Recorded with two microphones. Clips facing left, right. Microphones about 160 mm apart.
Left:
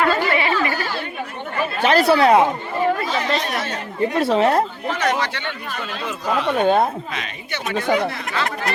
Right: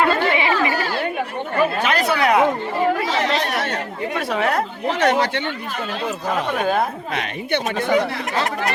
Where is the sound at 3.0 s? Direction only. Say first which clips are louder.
Right 1 dB; 80° right.